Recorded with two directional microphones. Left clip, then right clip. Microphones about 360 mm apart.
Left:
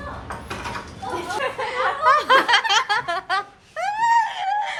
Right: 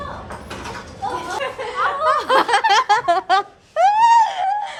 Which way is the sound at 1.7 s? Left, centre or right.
Centre.